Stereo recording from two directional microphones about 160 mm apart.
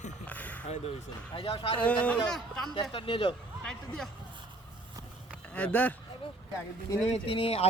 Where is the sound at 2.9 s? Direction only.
35° left (ahead or behind).